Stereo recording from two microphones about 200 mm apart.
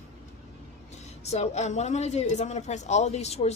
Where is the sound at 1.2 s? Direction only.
35° left (ahead or behind).